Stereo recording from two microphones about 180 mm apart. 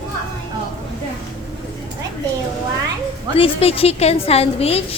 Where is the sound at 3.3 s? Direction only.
30° left (ahead or behind).